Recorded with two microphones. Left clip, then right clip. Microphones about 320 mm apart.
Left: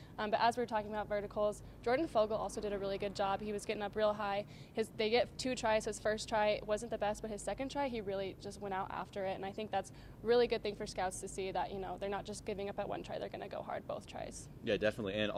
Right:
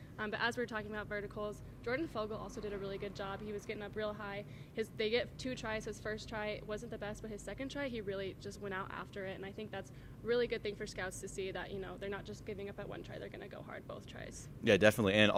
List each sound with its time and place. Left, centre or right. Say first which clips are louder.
0.2 s a woman's voice: left 4 dB; centre
14.6 s speech: right 6 dB; right